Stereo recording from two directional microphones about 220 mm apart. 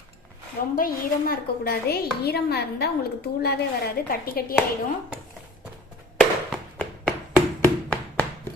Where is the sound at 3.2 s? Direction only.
45° left (ahead or behind).